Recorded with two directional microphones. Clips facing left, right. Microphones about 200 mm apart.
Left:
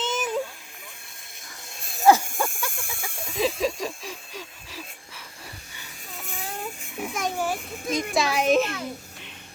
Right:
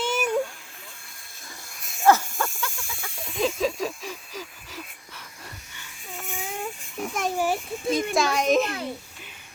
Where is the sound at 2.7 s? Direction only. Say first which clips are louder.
Left 2 dB; 55° left (ahead or behind).